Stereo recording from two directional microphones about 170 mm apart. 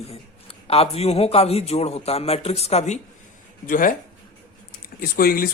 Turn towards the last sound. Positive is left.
turn(degrees=60)  # may be behind; listen again after turning